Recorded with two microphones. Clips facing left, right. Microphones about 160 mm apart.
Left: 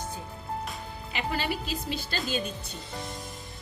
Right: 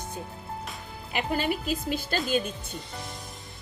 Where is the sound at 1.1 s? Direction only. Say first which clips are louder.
Right 3 dB; 50° right (ahead or behind).